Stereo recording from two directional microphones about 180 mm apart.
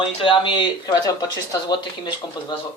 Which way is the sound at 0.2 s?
30° left (ahead or behind).